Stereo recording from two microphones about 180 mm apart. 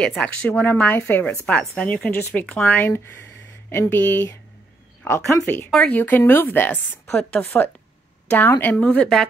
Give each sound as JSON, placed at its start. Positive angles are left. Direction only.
{"t": 0.0, "sound": "speech", "side_deg": 5}